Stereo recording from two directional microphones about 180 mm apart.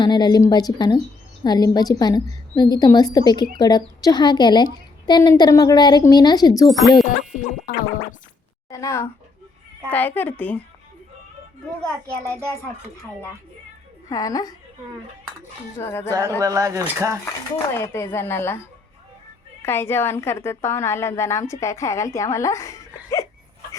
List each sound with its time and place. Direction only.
0.0 s a woman's voice: 25° left (ahead or behind)
6.7 s speech: centre (ahead or behind)
7.7 s music: 55° left (ahead or behind)
8.7 s a woman's voice: 15° left (ahead or behind)
14.1 s a woman's voice: 20° left (ahead or behind)
15.8 s a woman's voice: 15° left (ahead or behind)
16.4 s speech: 20° right (ahead or behind)
17.7 s a woman's voice: 15° left (ahead or behind)
19.6 s a woman's voice: 15° left (ahead or behind)